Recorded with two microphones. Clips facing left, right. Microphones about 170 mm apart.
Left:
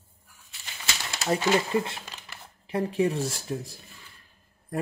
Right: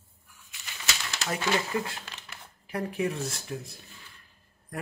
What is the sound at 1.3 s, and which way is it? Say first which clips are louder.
Speech: left 5 dB; 25° left (ahead or behind).